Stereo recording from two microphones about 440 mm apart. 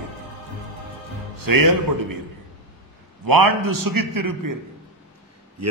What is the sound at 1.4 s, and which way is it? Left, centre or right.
Speech, right.